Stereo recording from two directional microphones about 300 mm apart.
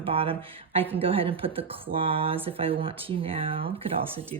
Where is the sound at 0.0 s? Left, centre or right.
Centre.